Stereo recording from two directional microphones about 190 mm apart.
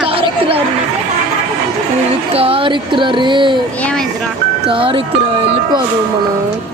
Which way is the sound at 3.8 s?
5° left (ahead or behind).